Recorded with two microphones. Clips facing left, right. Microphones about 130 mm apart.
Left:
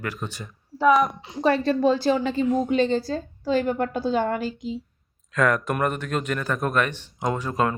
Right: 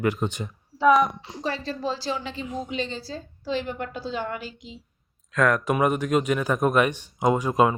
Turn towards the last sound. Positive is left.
turn(degrees=-10)  # may be behind; listen again after turning